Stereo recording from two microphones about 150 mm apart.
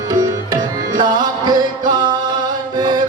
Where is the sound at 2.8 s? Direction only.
30° right (ahead or behind).